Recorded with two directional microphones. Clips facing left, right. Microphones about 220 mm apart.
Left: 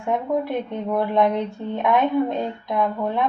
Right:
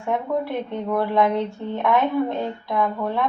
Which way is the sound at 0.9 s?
15° left (ahead or behind).